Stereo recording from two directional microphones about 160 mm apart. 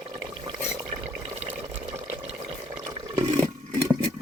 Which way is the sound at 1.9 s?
10° right (ahead or behind).